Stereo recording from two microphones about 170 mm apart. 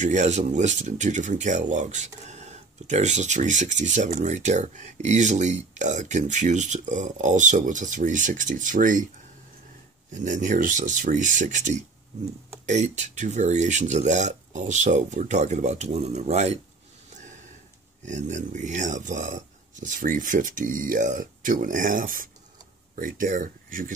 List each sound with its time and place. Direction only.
0.0 s speech: 45° right (ahead or behind)
10.1 s speech: 50° right (ahead or behind)
17.1 s a sound: 45° right (ahead or behind)
18.0 s speech: 45° right (ahead or behind)